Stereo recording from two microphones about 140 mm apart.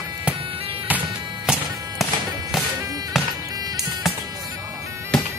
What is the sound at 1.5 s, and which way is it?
Music, 5° right (ahead or behind).